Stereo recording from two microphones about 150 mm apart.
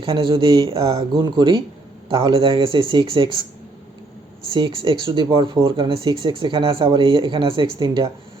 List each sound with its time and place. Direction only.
0.0 s speech: 35° right (ahead or behind)
4.5 s speech: 35° right (ahead or behind)